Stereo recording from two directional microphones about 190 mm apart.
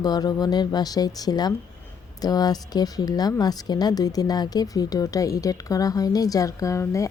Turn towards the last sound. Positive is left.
turn(degrees=15)  # may be behind; listen again after turning